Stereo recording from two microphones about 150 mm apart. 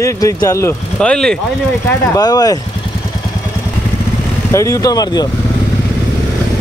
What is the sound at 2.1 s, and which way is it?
Speech, 25° left (ahead or behind).